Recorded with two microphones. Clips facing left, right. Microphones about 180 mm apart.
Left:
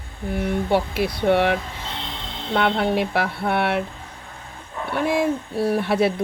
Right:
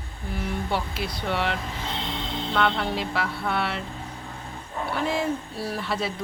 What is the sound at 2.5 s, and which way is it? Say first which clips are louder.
Speech: left 6 dB; 55° left (ahead or behind).